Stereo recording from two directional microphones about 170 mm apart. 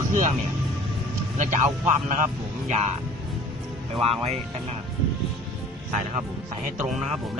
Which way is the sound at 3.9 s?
35° right (ahead or behind).